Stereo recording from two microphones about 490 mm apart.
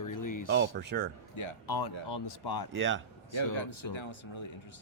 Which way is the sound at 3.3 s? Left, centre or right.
Left.